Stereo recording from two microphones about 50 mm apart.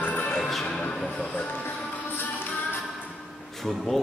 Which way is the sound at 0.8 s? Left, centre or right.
Centre.